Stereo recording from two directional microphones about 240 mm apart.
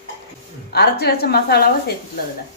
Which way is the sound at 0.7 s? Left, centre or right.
Left.